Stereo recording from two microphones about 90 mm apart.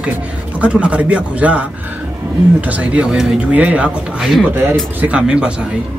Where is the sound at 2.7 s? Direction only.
15° right (ahead or behind).